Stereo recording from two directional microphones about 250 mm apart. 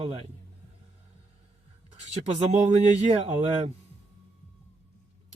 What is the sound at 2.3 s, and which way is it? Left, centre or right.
Speech, right.